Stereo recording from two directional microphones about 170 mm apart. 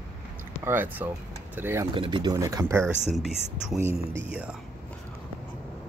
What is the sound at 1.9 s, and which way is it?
Speech, 30° right (ahead or behind).